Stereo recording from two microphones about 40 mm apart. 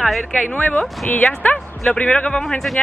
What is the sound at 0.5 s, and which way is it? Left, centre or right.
Speech, left.